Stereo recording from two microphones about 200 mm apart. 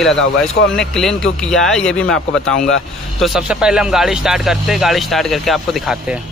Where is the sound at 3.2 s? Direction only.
5° right (ahead or behind).